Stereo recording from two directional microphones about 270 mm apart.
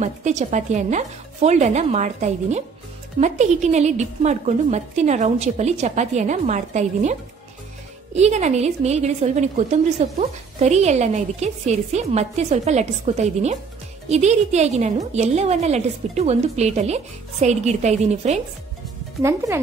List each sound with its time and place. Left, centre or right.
0.0 s a woman's voice: right
19.2 s speech: centre